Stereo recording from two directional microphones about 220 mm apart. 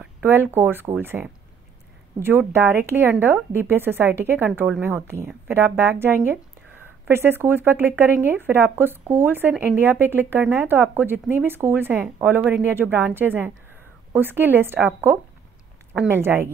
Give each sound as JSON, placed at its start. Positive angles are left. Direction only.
{"t": 0.0, "sound": "speech", "side_deg": -10}